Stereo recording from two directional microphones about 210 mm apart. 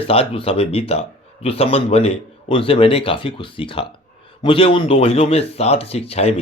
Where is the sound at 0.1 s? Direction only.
25° left (ahead or behind).